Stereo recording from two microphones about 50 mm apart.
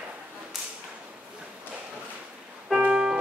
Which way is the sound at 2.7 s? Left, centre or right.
Right.